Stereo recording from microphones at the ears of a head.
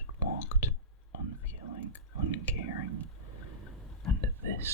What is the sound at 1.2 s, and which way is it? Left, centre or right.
Whispering, right.